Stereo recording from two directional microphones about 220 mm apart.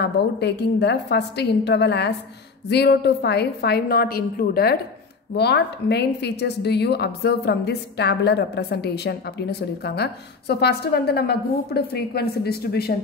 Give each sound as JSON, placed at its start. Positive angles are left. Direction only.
{"t": 0.0, "sound": "a woman's voice", "side_deg": 50}